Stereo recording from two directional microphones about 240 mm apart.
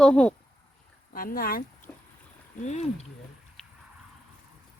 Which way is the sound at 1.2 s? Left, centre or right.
Left.